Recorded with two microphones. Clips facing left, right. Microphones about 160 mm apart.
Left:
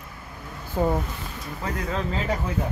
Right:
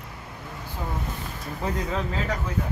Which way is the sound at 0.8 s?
60° left (ahead or behind).